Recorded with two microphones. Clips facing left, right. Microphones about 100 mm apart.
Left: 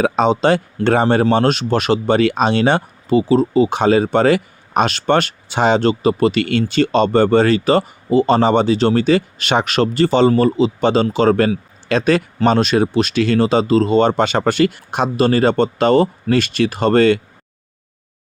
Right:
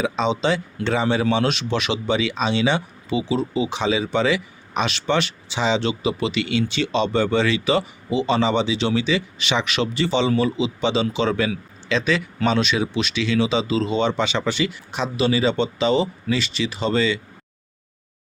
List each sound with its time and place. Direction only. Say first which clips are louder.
0.0 s speech: left 7 dB; 50° left (ahead or behind)